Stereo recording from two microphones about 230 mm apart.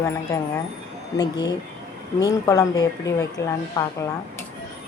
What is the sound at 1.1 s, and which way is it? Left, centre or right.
Speech, centre.